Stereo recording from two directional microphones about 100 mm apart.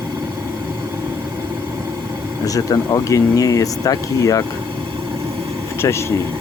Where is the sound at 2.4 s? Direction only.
35° left (ahead or behind).